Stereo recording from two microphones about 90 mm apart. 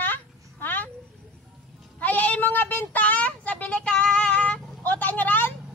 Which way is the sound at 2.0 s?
20° left (ahead or behind).